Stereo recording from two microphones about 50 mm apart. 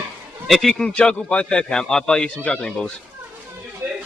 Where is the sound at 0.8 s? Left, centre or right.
Centre.